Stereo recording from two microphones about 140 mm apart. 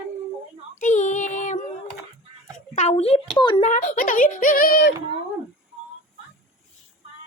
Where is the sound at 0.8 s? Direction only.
60° left (ahead or behind).